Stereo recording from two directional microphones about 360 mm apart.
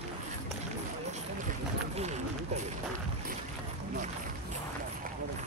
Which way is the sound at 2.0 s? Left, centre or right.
Centre.